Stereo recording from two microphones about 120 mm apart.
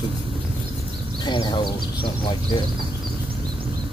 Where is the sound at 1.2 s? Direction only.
40° left (ahead or behind).